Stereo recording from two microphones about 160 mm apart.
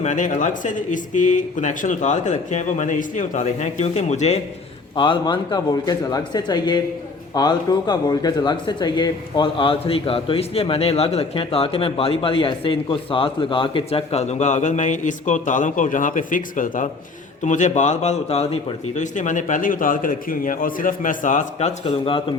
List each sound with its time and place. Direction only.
0.0 s speech: 50° left (ahead or behind)
4.9 s speech: 30° left (ahead or behind); by 21.7 s 50° left (ahead or behind)
21.8 s speech: 30° left (ahead or behind)